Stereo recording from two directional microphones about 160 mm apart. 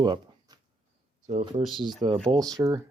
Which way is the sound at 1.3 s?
50° right (ahead or behind).